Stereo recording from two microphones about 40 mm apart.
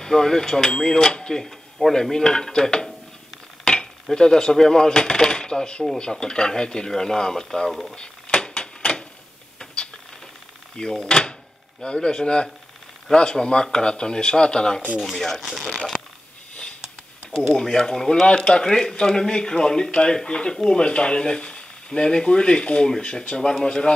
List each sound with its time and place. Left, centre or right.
0.0 s dishes: centre
1.4 s dishes: centre
3.6 s cutlery: left
5.9 s speech: left
6.9 s dishes: centre
7.9 s a sound: left
10.8 s speech: centre
15.0 s speech: centre
17.6 s dishes: centre
18.2 s speech: left
22.8 s dishes: centre
23.2 s speech: left
23.6 s dishes: centre